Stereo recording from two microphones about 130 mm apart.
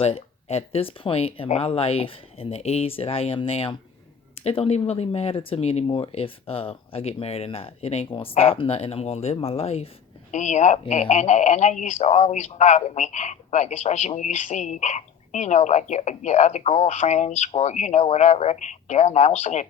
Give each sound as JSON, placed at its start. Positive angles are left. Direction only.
{"t": 0.0, "sound": "speech", "side_deg": 55}
{"t": 10.3, "sound": "speech", "side_deg": 65}